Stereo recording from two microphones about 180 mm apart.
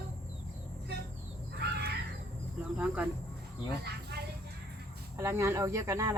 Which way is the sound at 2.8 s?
5° right (ahead or behind).